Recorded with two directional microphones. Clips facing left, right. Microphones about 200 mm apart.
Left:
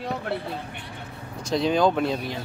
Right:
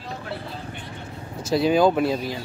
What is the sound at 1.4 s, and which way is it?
Speech, 5° right (ahead or behind).